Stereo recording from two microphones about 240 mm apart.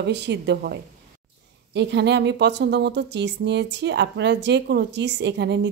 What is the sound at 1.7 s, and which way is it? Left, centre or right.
Speech, right.